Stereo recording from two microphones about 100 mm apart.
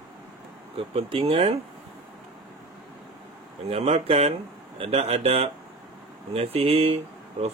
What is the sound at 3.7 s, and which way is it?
Speech, 90° right.